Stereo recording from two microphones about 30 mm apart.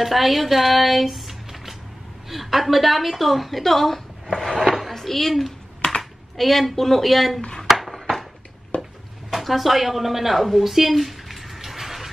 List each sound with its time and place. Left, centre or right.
0.0 s a woman's voice: centre
4.5 s chopping: centre
4.9 s a woman's voice: centre
7.6 s dishes: centre
8.7 s a sound: left
9.3 s a sound: centre